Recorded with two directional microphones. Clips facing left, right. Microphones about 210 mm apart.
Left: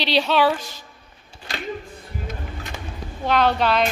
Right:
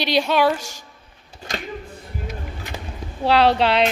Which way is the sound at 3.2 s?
30° right (ahead or behind).